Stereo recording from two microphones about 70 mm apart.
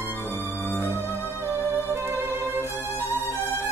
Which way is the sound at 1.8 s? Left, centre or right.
Right.